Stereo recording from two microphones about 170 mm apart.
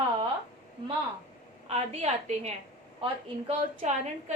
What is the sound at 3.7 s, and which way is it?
Speech, 45° right (ahead or behind).